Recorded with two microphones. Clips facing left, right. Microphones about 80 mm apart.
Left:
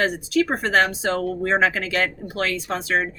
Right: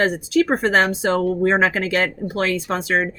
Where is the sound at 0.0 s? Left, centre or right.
Right.